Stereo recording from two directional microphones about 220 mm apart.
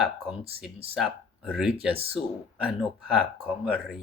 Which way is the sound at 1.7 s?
25° right (ahead or behind).